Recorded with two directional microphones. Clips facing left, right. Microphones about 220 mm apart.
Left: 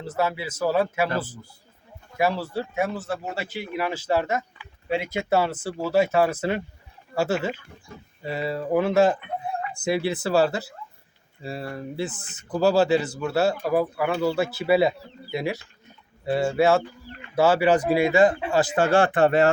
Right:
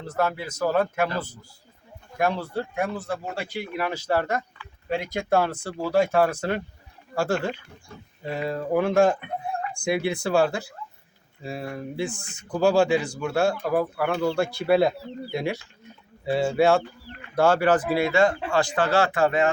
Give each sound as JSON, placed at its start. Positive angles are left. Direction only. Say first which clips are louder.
{"t": 0.0, "sound": "speech", "louder": "even", "side_deg": 5}
{"t": 18.9, "sound": "speech", "louder": "left 4 dB", "side_deg": 50}